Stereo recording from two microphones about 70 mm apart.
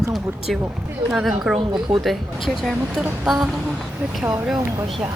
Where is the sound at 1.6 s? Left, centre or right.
Right.